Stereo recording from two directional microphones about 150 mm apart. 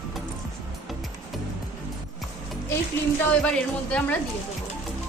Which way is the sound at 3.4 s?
10° left (ahead or behind).